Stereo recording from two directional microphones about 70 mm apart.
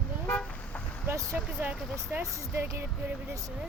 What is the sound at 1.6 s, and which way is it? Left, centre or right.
Speech, right.